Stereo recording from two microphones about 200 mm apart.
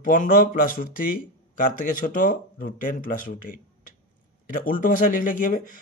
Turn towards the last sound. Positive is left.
turn(degrees=40)  # may be behind; listen again after turning